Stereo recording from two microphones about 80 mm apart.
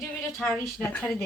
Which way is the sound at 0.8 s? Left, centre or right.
Left.